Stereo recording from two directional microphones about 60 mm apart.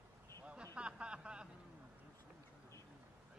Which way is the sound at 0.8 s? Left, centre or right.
Centre.